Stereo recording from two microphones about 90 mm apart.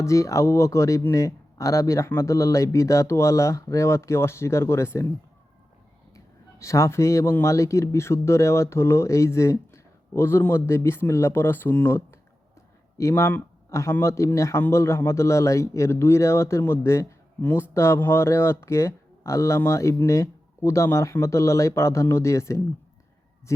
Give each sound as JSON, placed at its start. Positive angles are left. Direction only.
{"t": 0.0, "sound": "speech", "side_deg": 35}
{"t": 6.1, "sound": "speech", "side_deg": 35}